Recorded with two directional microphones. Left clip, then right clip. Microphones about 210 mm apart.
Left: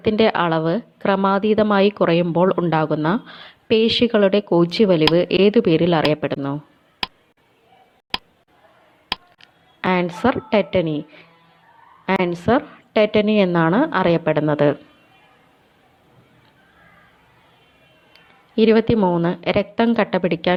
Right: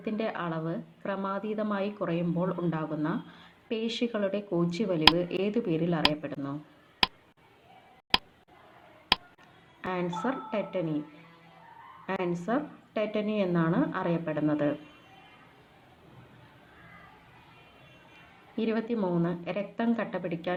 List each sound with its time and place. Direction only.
0.0 s a woman's voice: 40° left (ahead or behind)
7.0 s a sound: centre (ahead or behind)
9.4 s a sound: 40° left (ahead or behind)
10.5 s a woman's voice: 40° left (ahead or behind)
12.0 s a woman's voice: 40° left (ahead or behind)
18.5 s a woman's voice: 40° left (ahead or behind)